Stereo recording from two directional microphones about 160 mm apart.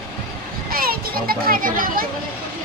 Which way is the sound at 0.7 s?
65° right (ahead or behind).